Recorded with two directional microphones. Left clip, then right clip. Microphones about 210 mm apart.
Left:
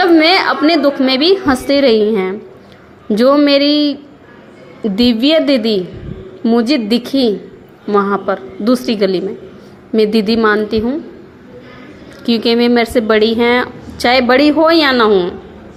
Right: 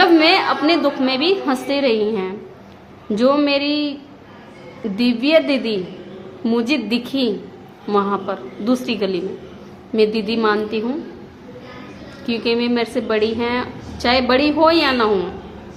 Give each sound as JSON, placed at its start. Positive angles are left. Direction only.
{"t": 0.0, "sound": "a woman's voice", "side_deg": 30}
{"t": 4.9, "sound": "a woman's voice", "side_deg": 35}
{"t": 12.2, "sound": "a woman's voice", "side_deg": 35}